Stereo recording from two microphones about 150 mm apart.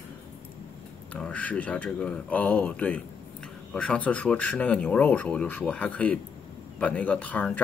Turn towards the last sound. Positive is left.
turn(degrees=10)  # may be behind; listen again after turning